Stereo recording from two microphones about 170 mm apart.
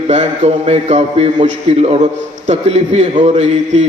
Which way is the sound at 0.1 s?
40° right (ahead or behind).